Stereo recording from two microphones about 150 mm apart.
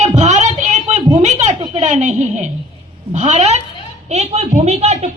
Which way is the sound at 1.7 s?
50° right (ahead or behind).